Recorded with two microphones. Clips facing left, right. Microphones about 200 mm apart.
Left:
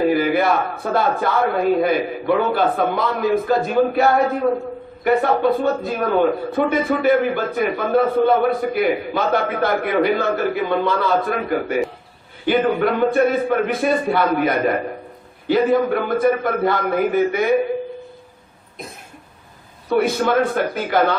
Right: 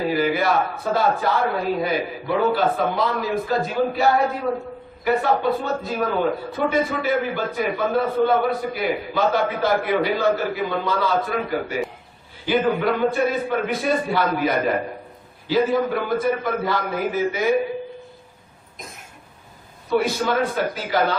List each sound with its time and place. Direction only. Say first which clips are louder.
0.0 s a man's voice: left 4 dB; 55° left (ahead or behind)
20.0 s a man's voice: left 5 dB; 55° left (ahead or behind)